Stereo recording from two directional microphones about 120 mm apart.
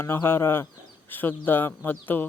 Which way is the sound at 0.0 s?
20° left (ahead or behind).